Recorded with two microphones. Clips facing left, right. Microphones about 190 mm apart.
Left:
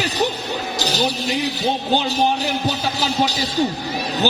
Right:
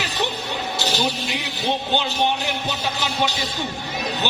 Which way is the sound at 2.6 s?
35° left (ahead or behind).